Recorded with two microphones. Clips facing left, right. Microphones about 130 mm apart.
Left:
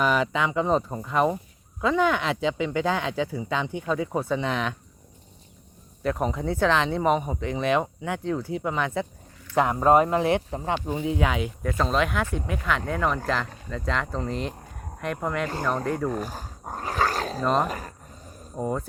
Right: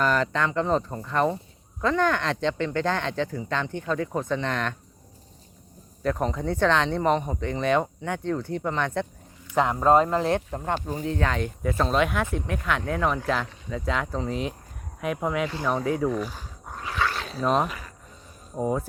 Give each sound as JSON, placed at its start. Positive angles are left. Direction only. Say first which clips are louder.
{"t": 0.0, "sound": "speech", "louder": "even", "side_deg": 10}
{"t": 6.0, "sound": "speech", "louder": "even", "side_deg": 5}
{"t": 16.0, "sound": "dog", "louder": "right 2 dB", "side_deg": 45}
{"t": 17.4, "sound": "speech", "louder": "right 1 dB", "side_deg": 0}
{"t": 17.7, "sound": "a sound", "louder": "left 6 dB", "side_deg": 40}
{"t": 18.5, "sound": "speech", "louder": "right 2 dB", "side_deg": -5}